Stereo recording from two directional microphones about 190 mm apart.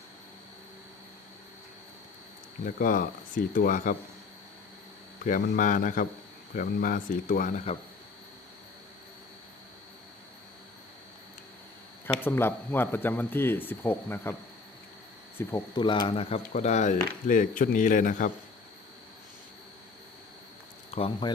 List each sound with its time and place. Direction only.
2.6 s speech: 45° left (ahead or behind)
5.2 s speech: 45° left (ahead or behind)
12.0 s speech: 10° left (ahead or behind)
15.4 s speech: 20° left (ahead or behind); by 18.3 s 45° left (ahead or behind)
20.9 s speech: 25° left (ahead or behind)